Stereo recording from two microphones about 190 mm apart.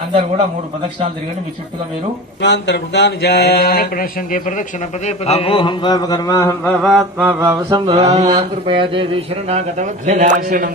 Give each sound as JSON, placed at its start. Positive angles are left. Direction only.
{"t": 2.4, "sound": "mantra", "side_deg": 65}
{"t": 5.0, "sound": "speech", "side_deg": 35}
{"t": 6.8, "sound": "mantra", "side_deg": -5}
{"t": 7.9, "sound": "speech", "side_deg": -30}